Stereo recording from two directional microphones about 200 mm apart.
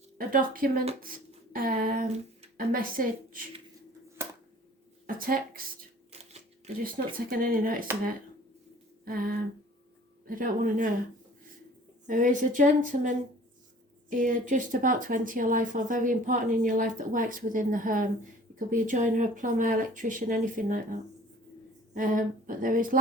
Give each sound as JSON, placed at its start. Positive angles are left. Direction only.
{"t": 0.2, "sound": "speech", "side_deg": -45}
{"t": 1.0, "sound": "a sound", "side_deg": -45}
{"t": 2.6, "sound": "speech", "side_deg": -45}
{"t": 5.0, "sound": "speech", "side_deg": -45}
{"t": 6.1, "sound": "shuffling cards", "side_deg": -30}
{"t": 6.8, "sound": "speech", "side_deg": -45}
{"t": 9.0, "sound": "speech", "side_deg": -45}
{"t": 12.0, "sound": "speech", "side_deg": -40}